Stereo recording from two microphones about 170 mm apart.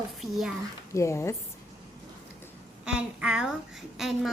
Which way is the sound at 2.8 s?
5° right (ahead or behind).